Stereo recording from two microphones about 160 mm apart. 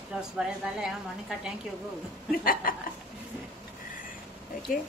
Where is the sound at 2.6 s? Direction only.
65° left (ahead or behind).